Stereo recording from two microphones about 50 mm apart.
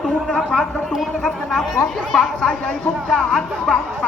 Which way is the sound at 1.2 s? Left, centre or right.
Centre.